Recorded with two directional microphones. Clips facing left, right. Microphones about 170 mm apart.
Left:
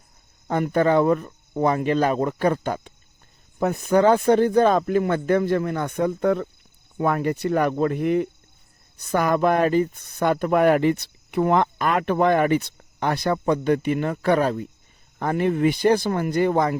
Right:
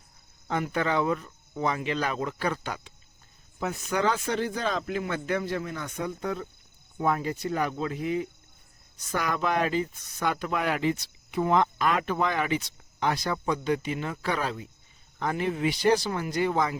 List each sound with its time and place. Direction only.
0.4 s speech: 45° left (ahead or behind)